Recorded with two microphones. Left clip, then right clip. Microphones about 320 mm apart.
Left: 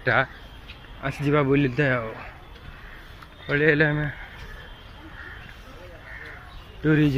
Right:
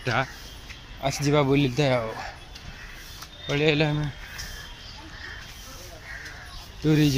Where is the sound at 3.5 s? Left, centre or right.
Centre.